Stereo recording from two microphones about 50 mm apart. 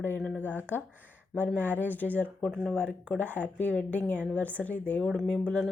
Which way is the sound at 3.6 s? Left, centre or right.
Left.